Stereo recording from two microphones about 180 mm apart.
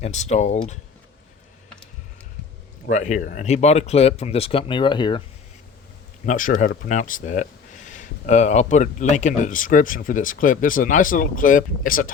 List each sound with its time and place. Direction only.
0.0 s speech: 40° left (ahead or behind)
2.8 s speech: 40° left (ahead or behind); by 5.2 s 25° left (ahead or behind)
6.2 s speech: 45° left (ahead or behind)